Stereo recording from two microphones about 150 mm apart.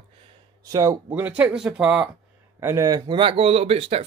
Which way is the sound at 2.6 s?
20° right (ahead or behind).